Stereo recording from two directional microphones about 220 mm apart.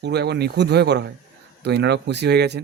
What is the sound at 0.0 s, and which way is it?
Speech, 50° right (ahead or behind).